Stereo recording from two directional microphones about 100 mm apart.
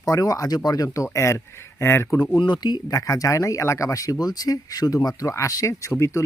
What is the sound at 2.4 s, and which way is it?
Speech, 45° left (ahead or behind).